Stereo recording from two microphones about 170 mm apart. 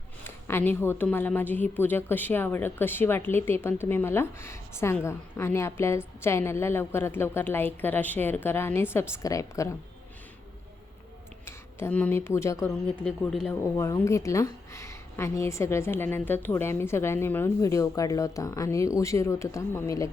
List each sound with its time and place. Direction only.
0.3 s a woman's voice: 15° left (ahead or behind)
11.4 s speech: 10° left (ahead or behind)
13.1 s speech: centre (ahead or behind)
13.5 s a woman's voice: 20° left (ahead or behind)